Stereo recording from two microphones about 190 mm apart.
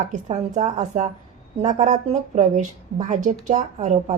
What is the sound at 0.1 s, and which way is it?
A woman's voice, 40° right (ahead or behind).